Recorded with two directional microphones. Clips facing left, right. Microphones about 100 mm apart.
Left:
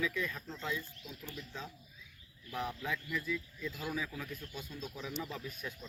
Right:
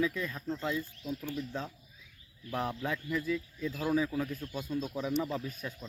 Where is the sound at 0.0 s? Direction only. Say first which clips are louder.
Right 4 dB; 35° right (ahead or behind).